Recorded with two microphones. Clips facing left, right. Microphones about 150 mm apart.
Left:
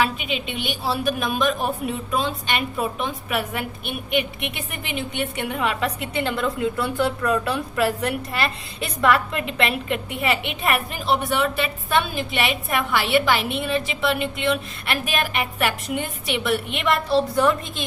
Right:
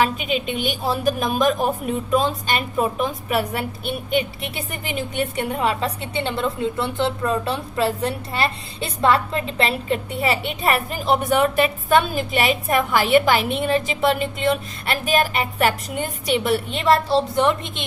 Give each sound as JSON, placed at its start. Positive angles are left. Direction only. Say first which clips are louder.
{"t": 0.0, "sound": "a woman's voice", "louder": "right 3 dB", "side_deg": -45}